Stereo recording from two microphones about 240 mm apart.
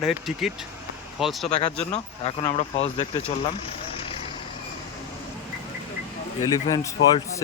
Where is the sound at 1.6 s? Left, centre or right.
Left.